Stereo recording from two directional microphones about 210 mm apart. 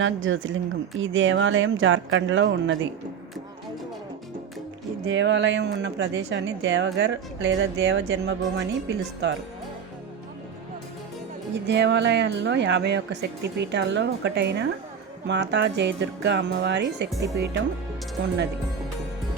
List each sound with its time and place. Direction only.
0.0 s speech: 65° right (ahead or behind)
5.0 s speech: 60° right (ahead or behind)
11.7 s speech: 55° right (ahead or behind)
17.2 s speech: 15° right (ahead or behind)